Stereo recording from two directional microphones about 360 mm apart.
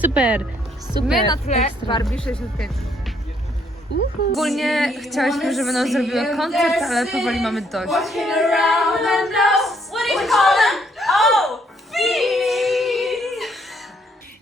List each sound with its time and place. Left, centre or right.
0.0 s speech: centre
1.3 s a woman's voice: centre
2.0 s speech: centre
4.3 s a sound: centre